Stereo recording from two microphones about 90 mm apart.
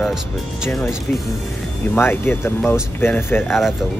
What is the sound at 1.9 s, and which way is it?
Speech, 25° left (ahead or behind).